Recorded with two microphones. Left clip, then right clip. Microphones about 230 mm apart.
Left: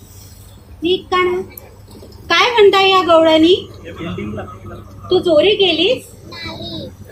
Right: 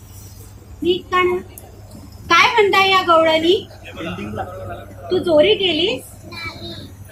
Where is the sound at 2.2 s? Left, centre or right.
Left.